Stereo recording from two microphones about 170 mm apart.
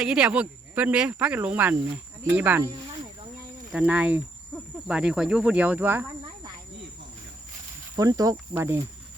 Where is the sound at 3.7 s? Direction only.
5° right (ahead or behind).